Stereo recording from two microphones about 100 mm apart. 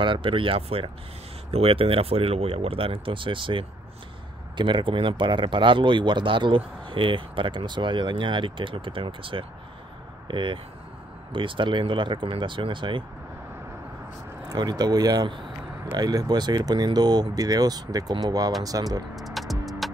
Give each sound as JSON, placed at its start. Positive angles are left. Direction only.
{"t": 0.0, "sound": "speech", "side_deg": -55}
{"t": 14.5, "sound": "speech", "side_deg": -45}
{"t": 19.1, "sound": "music", "side_deg": 0}